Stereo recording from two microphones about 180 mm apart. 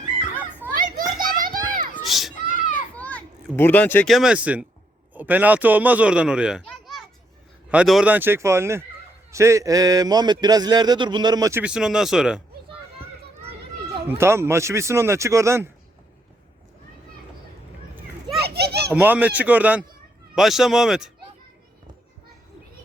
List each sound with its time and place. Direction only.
0.6 s children playing: 15° right (ahead or behind)
1.2 s children playing: 50° right (ahead or behind)
2.0 s children playing: centre (ahead or behind)
4.1 s speech: 5° right (ahead or behind)
6.7 s children playing: centre (ahead or behind)
7.7 s a man's voice: 5° right (ahead or behind); by 11.6 s 20° right (ahead or behind)
11.6 s speech: 5° right (ahead or behind)
14.1 s speech: 15° right (ahead or behind)
18.3 s children playing: 65° right (ahead or behind)
18.9 s speech: 10° right (ahead or behind)